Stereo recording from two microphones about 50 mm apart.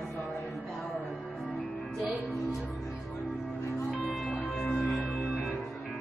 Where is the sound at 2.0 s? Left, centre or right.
Right.